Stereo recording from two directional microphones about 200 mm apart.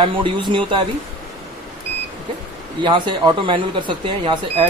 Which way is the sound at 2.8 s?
20° right (ahead or behind).